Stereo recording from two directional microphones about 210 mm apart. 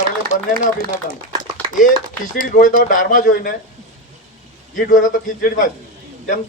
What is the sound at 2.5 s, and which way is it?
Speech, 40° left (ahead or behind).